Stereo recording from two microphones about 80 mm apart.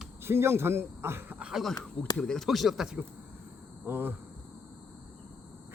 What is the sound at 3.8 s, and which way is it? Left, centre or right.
Speech, right.